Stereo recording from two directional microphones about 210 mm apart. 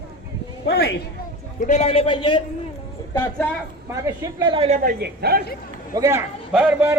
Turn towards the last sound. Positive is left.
turn(degrees=-10)  # may be behind; listen again after turning